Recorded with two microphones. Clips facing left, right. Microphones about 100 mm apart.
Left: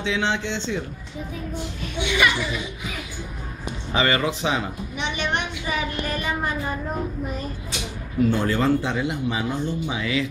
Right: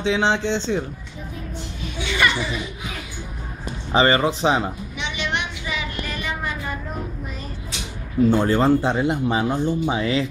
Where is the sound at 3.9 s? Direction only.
30° right (ahead or behind).